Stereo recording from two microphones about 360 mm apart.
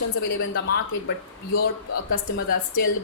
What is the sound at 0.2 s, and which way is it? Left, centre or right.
Speech, left.